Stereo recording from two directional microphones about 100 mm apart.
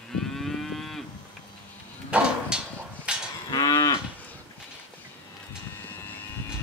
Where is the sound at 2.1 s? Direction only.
10° right (ahead or behind).